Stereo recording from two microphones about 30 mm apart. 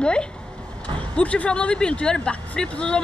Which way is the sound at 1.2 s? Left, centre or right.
Left.